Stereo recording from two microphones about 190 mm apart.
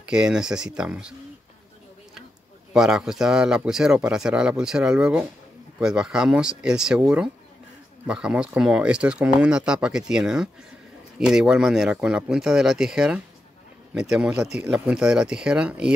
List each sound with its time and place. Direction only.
0.0 s speech: 5° right (ahead or behind)
2.7 s speech: centre (ahead or behind)